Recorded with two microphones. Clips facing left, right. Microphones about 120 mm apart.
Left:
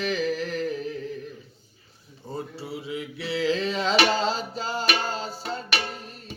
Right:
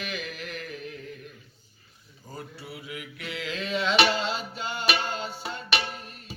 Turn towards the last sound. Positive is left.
turn(degrees=35)  # may be behind; listen again after turning